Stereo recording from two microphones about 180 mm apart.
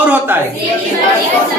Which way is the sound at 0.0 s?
10° right (ahead or behind).